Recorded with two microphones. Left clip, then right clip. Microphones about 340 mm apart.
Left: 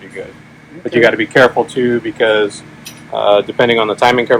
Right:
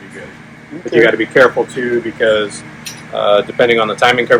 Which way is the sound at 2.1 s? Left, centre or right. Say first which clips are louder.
Even; centre.